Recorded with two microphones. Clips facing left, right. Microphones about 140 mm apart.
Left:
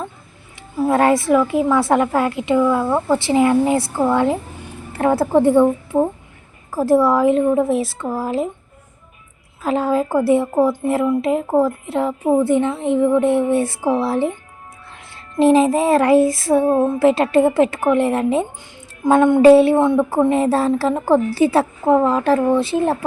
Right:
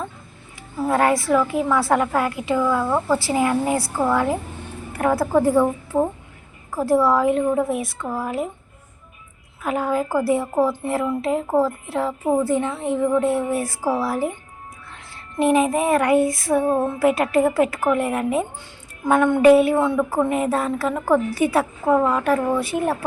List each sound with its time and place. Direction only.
0.9 s speech: 25° left (ahead or behind)
9.6 s speech: 25° left (ahead or behind)
15.4 s speech: 25° left (ahead or behind)